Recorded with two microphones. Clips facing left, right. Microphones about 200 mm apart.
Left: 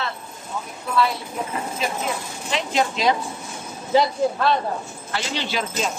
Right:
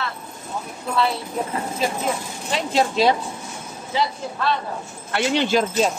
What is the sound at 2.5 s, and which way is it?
Speech, 30° right (ahead or behind).